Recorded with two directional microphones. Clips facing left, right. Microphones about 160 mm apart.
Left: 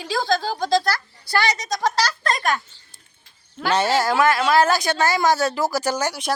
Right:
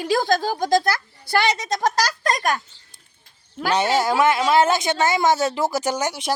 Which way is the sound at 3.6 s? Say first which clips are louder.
Even; 15° right (ahead or behind).